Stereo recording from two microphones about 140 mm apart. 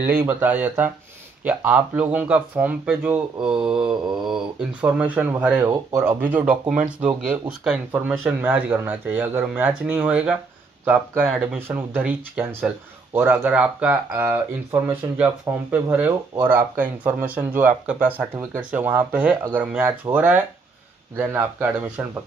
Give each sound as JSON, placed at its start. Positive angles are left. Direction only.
{"t": 0.0, "sound": "speech", "side_deg": -15}
{"t": 11.3, "sound": "speech", "side_deg": -15}